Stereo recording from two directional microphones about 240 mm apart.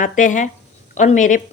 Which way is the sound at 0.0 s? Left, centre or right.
Left.